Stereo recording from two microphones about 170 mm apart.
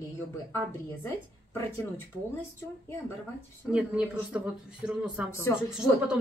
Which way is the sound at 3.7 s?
5° right (ahead or behind).